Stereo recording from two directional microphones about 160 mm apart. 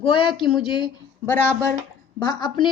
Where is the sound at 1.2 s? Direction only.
15° left (ahead or behind).